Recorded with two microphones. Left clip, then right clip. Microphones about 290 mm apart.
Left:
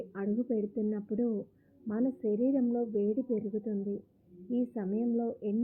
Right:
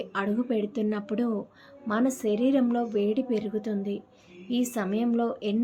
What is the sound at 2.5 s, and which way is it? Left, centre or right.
Speech, centre.